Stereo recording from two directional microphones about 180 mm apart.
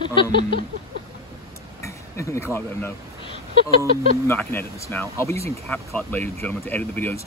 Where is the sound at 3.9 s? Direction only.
55° right (ahead or behind).